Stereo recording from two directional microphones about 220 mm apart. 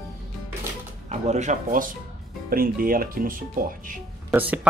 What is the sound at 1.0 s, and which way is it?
Speech, 30° right (ahead or behind).